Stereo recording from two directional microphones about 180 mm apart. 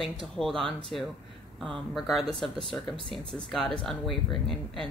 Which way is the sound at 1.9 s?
Centre (ahead or behind).